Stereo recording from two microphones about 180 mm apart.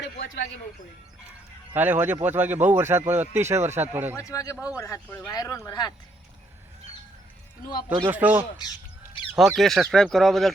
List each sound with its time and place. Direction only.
0.0 s a sound: 65° left (ahead or behind)
1.7 s speech: 10° right (ahead or behind)
4.2 s a man's voice: 20° left (ahead or behind)
8.1 s speech: 10° right (ahead or behind)